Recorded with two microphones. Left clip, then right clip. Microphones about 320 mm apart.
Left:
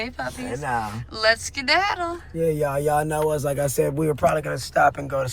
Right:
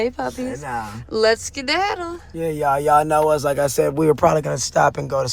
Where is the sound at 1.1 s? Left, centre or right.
Centre.